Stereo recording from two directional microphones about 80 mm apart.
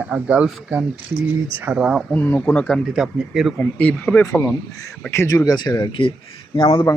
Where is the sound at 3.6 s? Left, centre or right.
Centre.